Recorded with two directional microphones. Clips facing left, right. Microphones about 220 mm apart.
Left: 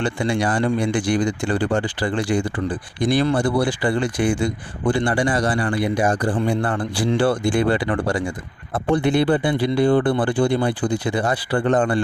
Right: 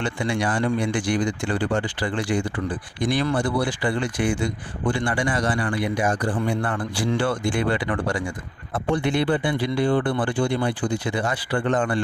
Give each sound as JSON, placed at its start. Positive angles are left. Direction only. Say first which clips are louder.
{"t": 0.0, "sound": "speech", "louder": "left 3 dB", "side_deg": 35}